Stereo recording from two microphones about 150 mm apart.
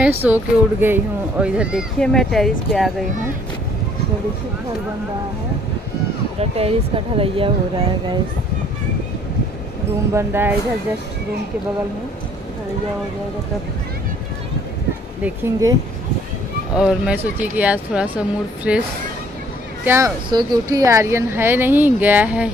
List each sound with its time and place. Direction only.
0.2 s speech: 15° right (ahead or behind)
2.0 s speech: 5° left (ahead or behind)
6.4 s speech: 40° right (ahead or behind)
10.1 s speech: 15° right (ahead or behind)
15.2 s speech: 15° right (ahead or behind)
16.7 s speech: 5° right (ahead or behind)
19.8 s speech: 15° right (ahead or behind)
20.3 s speech: 25° right (ahead or behind); by 22.5 s 10° right (ahead or behind)